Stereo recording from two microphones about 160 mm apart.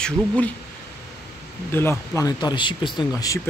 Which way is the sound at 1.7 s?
15° left (ahead or behind).